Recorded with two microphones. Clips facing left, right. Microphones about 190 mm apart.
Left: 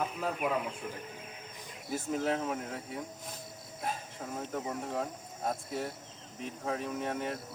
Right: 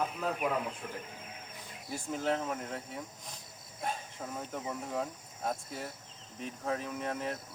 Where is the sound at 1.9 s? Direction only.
Centre (ahead or behind).